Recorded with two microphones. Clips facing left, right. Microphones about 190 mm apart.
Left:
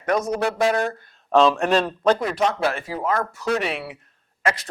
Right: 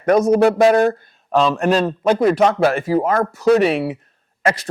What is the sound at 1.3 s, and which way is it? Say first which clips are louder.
Speech: right 1 dB; centre (ahead or behind).